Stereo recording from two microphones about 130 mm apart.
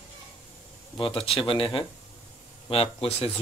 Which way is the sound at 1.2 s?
45° left (ahead or behind).